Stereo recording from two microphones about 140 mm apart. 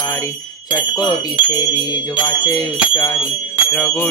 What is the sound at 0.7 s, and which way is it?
Speech, 30° left (ahead or behind).